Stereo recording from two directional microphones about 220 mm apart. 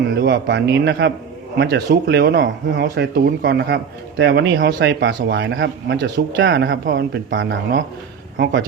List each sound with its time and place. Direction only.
0.1 s speech: 50° right (ahead or behind)